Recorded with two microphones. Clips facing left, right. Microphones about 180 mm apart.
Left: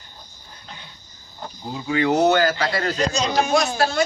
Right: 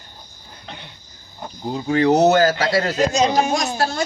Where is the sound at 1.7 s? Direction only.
35° right (ahead or behind).